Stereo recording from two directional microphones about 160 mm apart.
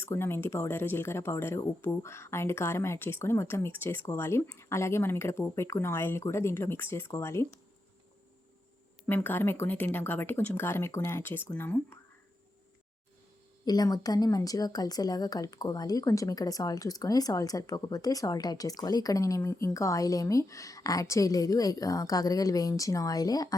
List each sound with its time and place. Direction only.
0.0 s speech: 15° left (ahead or behind)
9.0 s speech: 10° left (ahead or behind)
13.7 s speech: 25° left (ahead or behind)